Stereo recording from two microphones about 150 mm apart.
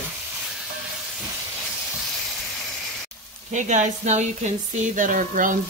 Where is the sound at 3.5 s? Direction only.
50° right (ahead or behind).